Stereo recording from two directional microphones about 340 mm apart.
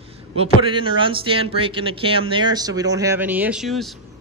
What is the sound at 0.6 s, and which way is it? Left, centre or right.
Speech, centre.